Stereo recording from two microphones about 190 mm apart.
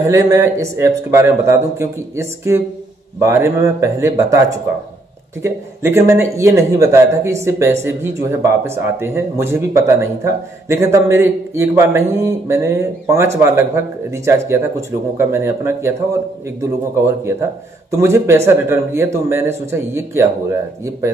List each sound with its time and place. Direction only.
0.1 s speech: 15° right (ahead or behind)
5.4 s speech: 15° right (ahead or behind)
17.0 s speech: 15° right (ahead or behind)